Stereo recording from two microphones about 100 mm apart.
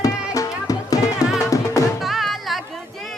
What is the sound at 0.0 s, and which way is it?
Music, 35° left (ahead or behind).